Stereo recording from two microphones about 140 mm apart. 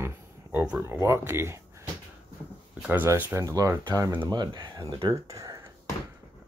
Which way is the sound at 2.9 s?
15° right (ahead or behind).